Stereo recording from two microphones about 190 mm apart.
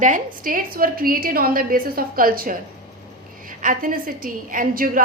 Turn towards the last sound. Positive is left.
turn(degrees=-45)  # may be behind; listen again after turning